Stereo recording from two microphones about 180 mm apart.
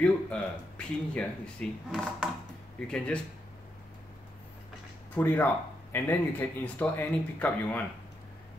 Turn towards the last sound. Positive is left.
turn(degrees=10)  # may be behind; listen again after turning